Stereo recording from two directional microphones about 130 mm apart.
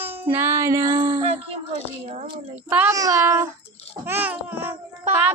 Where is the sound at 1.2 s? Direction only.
45° right (ahead or behind).